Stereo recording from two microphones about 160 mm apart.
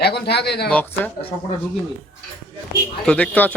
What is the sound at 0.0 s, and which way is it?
Speech, 90° left.